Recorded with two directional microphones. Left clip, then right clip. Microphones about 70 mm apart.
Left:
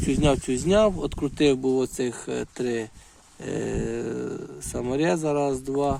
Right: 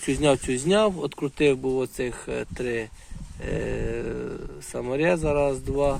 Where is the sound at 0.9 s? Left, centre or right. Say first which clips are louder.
Even; left.